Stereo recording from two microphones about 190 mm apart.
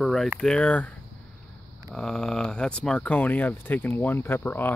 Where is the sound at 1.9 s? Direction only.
5° left (ahead or behind).